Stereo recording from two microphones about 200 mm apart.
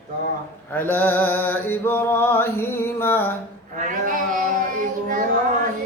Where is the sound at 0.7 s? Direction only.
10° left (ahead or behind).